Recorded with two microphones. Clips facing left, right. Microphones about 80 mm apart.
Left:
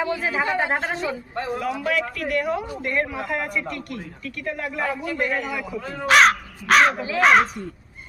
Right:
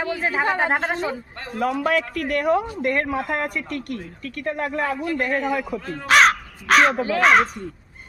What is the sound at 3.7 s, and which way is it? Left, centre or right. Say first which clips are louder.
Speech: right 2 dB; right.